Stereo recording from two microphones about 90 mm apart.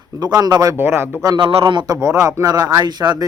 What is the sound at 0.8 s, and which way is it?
Speech, 25° right (ahead or behind).